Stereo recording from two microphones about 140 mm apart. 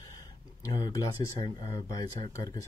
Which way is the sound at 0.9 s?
25° left (ahead or behind).